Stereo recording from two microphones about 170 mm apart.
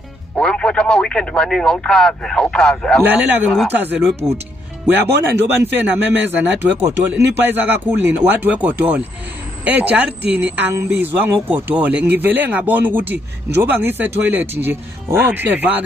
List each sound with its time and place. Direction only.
0.4 s speech: 5° left (ahead or behind)
3.0 s speech: 10° right (ahead or behind)
5.0 s speech: 80° right
5.6 s speech: 10° right (ahead or behind)